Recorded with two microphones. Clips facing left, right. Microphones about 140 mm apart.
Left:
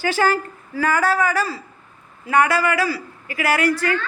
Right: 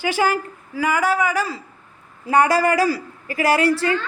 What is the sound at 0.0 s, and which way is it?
Speech, 15° right (ahead or behind).